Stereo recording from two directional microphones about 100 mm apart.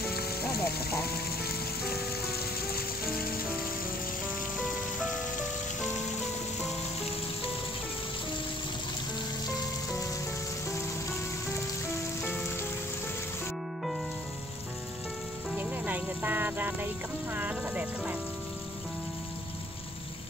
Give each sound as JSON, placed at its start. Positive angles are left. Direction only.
{"t": 15.5, "sound": "music", "side_deg": -15}